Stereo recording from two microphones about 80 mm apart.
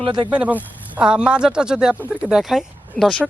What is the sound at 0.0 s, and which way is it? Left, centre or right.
Speech, right.